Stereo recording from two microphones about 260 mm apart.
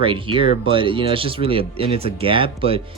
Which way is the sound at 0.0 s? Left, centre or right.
Centre.